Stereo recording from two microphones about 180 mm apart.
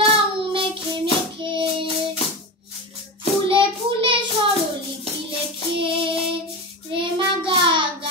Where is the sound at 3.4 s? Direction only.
30° right (ahead or behind).